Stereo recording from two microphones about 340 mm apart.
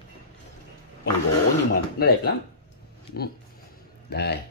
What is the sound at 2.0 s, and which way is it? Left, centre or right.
Speech, left.